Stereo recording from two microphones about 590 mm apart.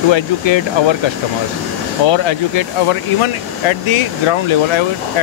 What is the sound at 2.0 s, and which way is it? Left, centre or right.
Speech, left.